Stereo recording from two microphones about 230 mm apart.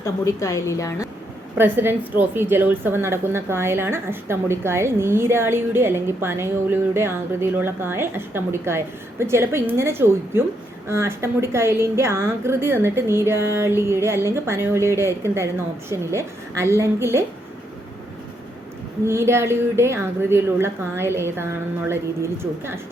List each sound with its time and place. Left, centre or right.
0.0 s a woman's voice: centre
1.5 s a woman's voice: centre
19.0 s a woman's voice: centre